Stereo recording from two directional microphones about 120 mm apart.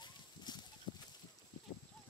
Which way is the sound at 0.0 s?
35° left (ahead or behind).